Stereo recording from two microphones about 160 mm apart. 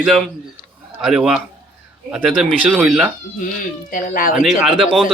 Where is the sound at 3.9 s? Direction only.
60° left (ahead or behind).